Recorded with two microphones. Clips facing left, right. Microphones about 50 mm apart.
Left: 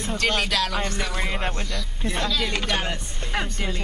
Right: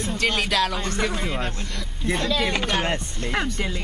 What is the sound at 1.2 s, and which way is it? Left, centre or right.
Speech, left.